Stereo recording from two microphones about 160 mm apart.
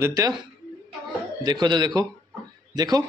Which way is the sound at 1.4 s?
25° right (ahead or behind).